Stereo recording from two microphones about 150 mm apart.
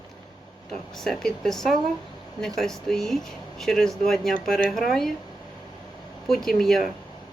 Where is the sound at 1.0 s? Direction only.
5° left (ahead or behind).